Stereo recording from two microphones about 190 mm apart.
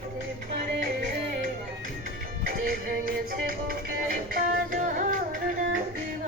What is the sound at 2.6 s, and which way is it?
Music, 50° right (ahead or behind).